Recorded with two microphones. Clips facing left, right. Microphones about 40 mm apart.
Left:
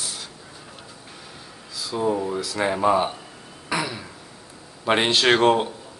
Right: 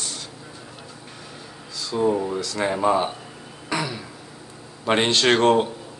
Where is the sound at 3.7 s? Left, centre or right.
Centre.